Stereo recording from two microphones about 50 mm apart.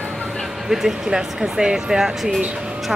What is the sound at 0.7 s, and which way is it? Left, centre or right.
Speech, centre.